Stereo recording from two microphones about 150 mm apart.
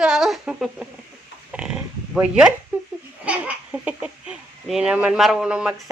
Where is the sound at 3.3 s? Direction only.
10° right (ahead or behind).